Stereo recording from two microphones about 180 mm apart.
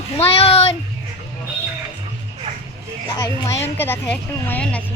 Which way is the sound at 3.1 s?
20° left (ahead or behind).